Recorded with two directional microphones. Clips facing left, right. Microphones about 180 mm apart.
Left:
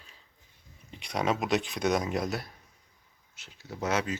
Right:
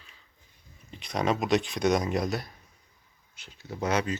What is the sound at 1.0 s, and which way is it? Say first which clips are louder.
Speech: right 2 dB; 10° left (ahead or behind).